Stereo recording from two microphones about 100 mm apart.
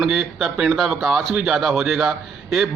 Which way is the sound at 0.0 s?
Centre (ahead or behind).